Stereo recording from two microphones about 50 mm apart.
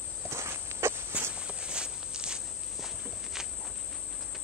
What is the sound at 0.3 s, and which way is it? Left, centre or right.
Walk, right.